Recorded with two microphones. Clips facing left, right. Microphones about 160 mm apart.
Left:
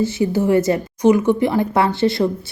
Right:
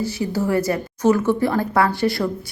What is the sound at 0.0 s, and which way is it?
Speech, 25° left (ahead or behind).